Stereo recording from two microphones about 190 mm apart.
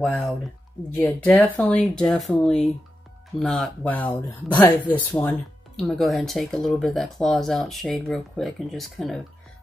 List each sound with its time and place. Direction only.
0.0 s speech: 5° left (ahead or behind)